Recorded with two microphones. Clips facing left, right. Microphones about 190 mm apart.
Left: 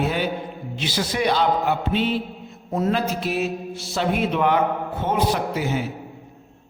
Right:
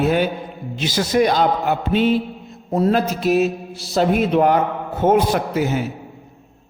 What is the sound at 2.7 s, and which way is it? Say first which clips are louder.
Mantra: right 4 dB; 40° right (ahead or behind).